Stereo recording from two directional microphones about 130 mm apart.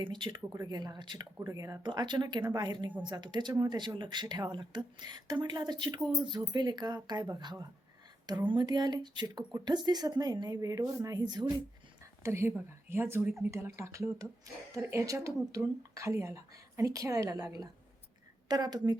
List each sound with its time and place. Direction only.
0.0 s speech: 35° right (ahead or behind)
1.4 s speech: 25° right (ahead or behind)
12.2 s speech: 20° right (ahead or behind)